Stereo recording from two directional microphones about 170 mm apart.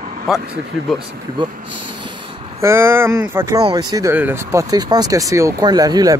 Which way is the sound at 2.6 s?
15° right (ahead or behind).